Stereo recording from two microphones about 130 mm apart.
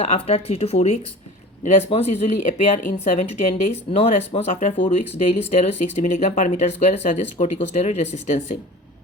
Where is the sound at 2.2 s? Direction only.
80° left.